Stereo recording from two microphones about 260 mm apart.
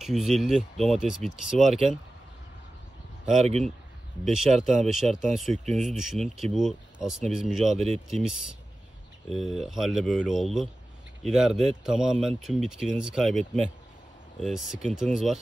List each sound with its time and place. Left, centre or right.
0.0 s speech: centre
3.3 s speech: right
4.8 s speech: centre
7.7 s speech: right
8.1 s speech: centre